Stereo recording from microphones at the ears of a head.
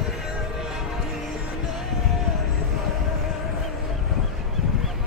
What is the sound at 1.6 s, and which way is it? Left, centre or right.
Music, left.